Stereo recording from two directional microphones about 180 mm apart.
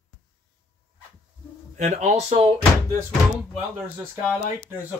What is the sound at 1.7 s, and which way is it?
Speech, 40° right (ahead or behind).